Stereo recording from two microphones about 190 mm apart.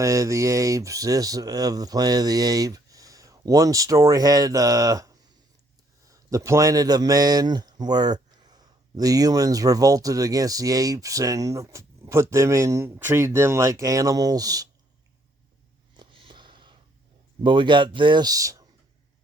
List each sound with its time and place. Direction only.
0.0 s a man's voice: 15° right (ahead or behind)
16.0 s a sound: 25° right (ahead or behind)
17.4 s a man's voice: 25° right (ahead or behind)